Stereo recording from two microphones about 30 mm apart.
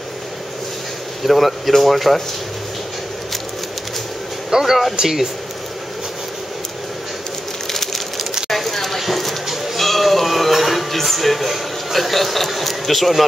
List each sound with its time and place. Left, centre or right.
1.2 s speech: centre
4.5 s speech: centre
7.7 s a sound: centre
9.8 s music: centre